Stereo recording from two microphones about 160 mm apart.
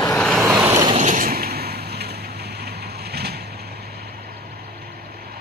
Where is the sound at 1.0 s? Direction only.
55° right (ahead or behind); by 3.4 s 90° right.